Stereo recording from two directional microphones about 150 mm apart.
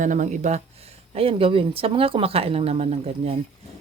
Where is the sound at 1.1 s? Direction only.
40° right (ahead or behind).